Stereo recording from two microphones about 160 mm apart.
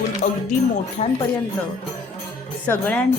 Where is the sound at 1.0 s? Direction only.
45° left (ahead or behind).